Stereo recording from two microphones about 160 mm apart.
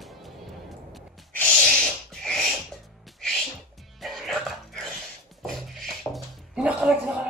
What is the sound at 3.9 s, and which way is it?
Music, centre (ahead or behind).